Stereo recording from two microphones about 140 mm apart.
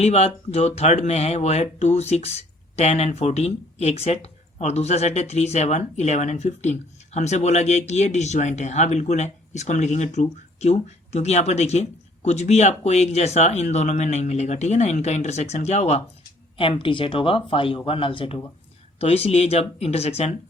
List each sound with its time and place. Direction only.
0.0 s speech: 50° left (ahead or behind)
16.6 s speech: 40° left (ahead or behind)